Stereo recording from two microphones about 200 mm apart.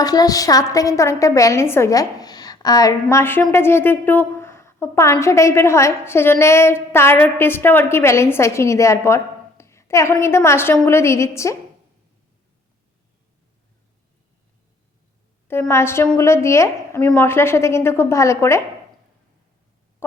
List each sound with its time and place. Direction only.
0.0 s a woman's voice: 20° left (ahead or behind)
15.4 s a woman's voice: 10° left (ahead or behind)
20.0 s owl: 10° left (ahead or behind)